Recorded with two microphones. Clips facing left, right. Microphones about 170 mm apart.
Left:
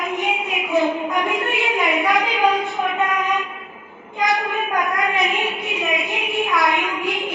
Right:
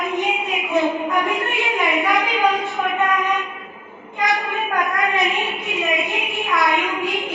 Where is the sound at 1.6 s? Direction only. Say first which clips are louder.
Even; centre (ahead or behind).